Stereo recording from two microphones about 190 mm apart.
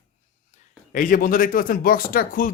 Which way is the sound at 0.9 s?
45° left (ahead or behind).